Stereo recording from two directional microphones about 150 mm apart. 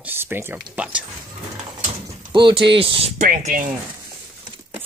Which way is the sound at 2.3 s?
30° right (ahead or behind).